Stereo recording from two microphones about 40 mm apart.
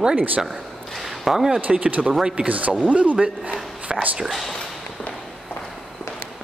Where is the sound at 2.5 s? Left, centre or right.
Right.